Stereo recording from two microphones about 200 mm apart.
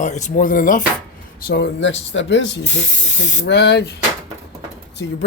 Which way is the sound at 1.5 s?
65° left (ahead or behind).